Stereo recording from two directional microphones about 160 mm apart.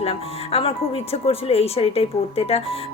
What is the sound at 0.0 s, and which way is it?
Speech, 35° left (ahead or behind).